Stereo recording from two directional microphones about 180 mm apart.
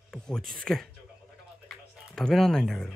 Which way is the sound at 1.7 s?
Centre (ahead or behind).